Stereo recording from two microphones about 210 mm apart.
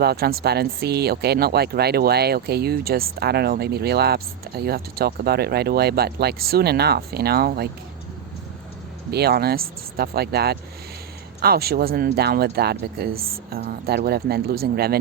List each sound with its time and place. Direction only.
0.0 s speech: 50° right (ahead or behind)
9.0 s speech: 50° right (ahead or behind)